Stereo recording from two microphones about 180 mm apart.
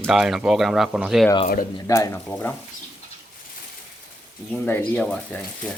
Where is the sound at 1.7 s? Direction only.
15° left (ahead or behind).